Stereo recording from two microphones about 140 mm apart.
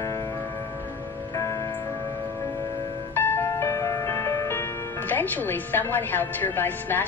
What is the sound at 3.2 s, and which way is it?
Music, 15° left (ahead or behind).